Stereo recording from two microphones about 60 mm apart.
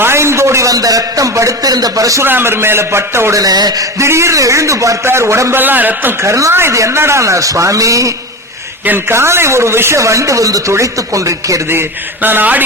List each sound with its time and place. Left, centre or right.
0.0 s a sound: right
0.7 s speech: right
2.2 s speech: right
3.3 s speech: right
4.0 s a man's voice: right
5.0 s speech: right
5.6 s a man's voice: right
6.2 s a man's voice: right
6.5 s a man's voice: right
9.0 s speech: right
10.0 s a man's voice: right
11.7 s a man's voice: right